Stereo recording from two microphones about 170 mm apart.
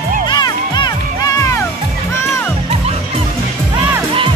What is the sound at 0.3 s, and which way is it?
Music, 25° left (ahead or behind).